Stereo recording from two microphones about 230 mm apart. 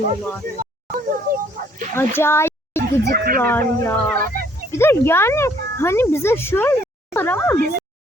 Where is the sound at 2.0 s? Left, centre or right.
Centre.